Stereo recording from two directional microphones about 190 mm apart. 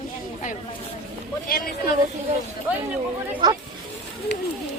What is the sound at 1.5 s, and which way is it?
Speech, 50° left (ahead or behind).